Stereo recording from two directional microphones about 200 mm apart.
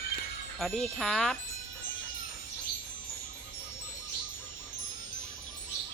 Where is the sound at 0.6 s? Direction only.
Centre (ahead or behind).